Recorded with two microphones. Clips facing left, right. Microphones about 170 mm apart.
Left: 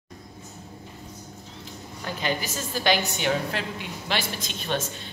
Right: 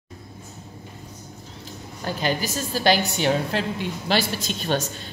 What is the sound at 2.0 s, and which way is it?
A woman's voice, 35° right (ahead or behind).